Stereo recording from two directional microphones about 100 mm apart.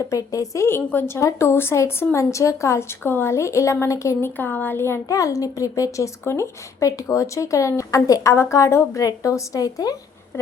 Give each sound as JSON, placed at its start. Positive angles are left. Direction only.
{"t": 0.1, "sound": "a woman's voice", "side_deg": 35}
{"t": 4.4, "sound": "a woman's voice", "side_deg": 20}